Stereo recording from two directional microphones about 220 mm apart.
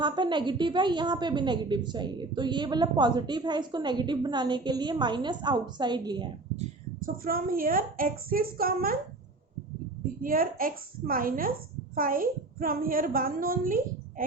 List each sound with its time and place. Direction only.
0.0 s a woman's voice: 20° right (ahead or behind)
7.0 s a woman's voice: 40° right (ahead or behind)
10.2 s a woman's voice: 40° right (ahead or behind)